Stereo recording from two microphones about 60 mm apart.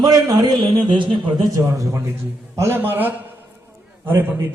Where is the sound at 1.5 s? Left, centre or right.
Right.